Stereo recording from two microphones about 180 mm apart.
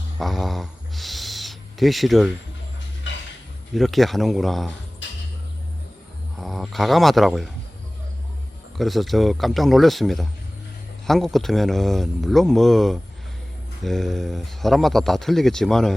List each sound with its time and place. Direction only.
0.2 s speech: centre (ahead or behind)
3.1 s a sound: 90° left
3.8 s speech: centre (ahead or behind)
6.4 s speech: centre (ahead or behind)
8.8 s speech: centre (ahead or behind)